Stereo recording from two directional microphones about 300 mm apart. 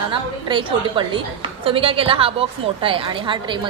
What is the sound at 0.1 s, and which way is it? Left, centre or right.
A woman's voice, centre.